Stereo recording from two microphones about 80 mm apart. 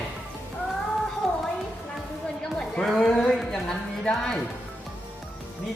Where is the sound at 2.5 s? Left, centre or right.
Centre.